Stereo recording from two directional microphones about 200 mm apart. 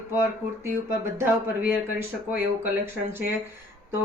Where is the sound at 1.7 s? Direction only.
10° right (ahead or behind).